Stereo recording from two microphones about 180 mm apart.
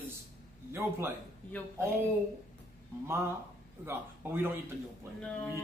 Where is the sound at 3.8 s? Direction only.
10° right (ahead or behind).